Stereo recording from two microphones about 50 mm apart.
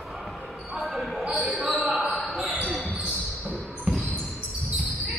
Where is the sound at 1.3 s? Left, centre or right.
Right.